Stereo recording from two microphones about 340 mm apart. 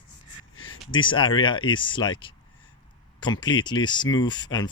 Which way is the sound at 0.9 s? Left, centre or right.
Centre.